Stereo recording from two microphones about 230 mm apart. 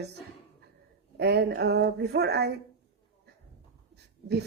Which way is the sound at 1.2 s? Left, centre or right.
Right.